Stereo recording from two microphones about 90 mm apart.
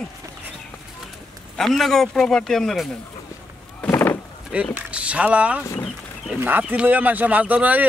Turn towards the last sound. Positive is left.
turn(degrees=-15)  # may be behind; listen again after turning